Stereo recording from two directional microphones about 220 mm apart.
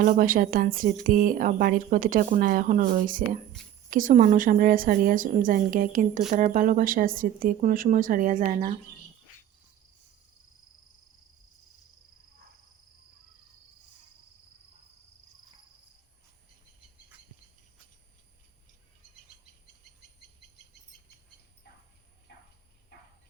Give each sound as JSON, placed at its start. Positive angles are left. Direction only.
{"t": 0.0, "sound": "a woman's voice", "side_deg": -40}